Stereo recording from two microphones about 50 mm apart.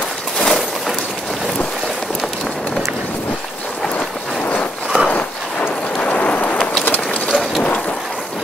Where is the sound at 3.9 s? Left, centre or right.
Left.